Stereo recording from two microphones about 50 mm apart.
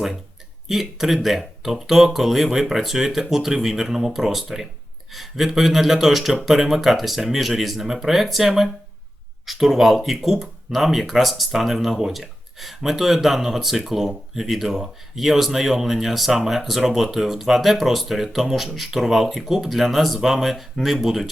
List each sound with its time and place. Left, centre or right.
0.7 s speech: centre